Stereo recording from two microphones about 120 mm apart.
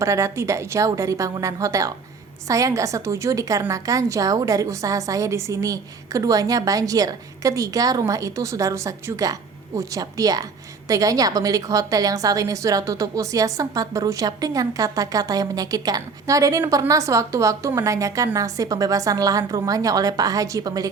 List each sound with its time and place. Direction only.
0.0 s a woman's voice: 25° right (ahead or behind)